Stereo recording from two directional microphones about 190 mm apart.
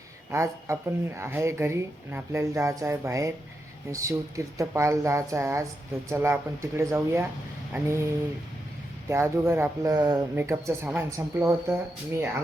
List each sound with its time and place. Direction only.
0.3 s speech: 15° right (ahead or behind)
9.0 s speech: 15° right (ahead or behind)